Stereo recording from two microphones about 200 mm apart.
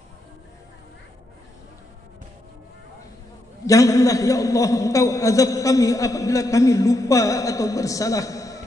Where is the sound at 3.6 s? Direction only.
15° left (ahead or behind).